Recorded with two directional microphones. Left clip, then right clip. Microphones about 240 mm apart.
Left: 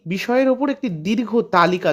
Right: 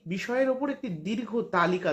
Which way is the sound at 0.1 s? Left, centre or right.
Left.